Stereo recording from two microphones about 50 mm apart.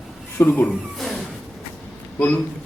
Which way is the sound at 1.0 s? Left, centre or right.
Centre.